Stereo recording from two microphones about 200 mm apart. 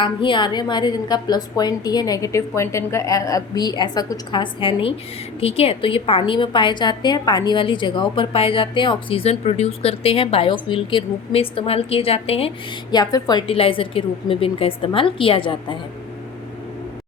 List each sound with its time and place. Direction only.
0.0 s a woman's voice: 25° left (ahead or behind)
12.9 s a woman's voice: 20° left (ahead or behind)